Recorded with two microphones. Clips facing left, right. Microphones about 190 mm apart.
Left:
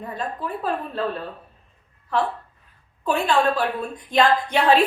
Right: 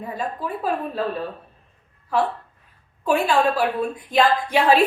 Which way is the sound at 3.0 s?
10° right (ahead or behind).